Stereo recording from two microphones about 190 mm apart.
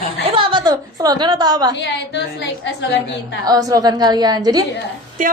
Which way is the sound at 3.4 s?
20° right (ahead or behind).